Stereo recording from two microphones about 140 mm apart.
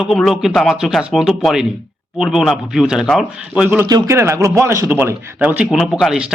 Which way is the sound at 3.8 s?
25° right (ahead or behind).